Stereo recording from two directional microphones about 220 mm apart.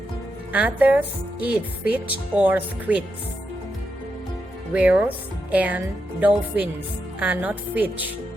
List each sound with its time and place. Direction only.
0.5 s speech: 5° right (ahead or behind)
4.7 s speech: 5° right (ahead or behind)